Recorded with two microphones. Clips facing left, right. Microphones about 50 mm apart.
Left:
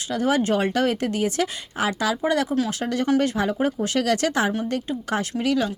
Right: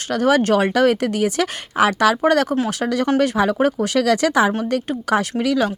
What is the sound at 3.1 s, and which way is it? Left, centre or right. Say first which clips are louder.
Speech: right 2 dB; right.